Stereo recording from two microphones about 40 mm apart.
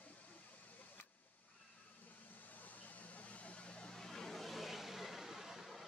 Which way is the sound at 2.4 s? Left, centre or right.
Left.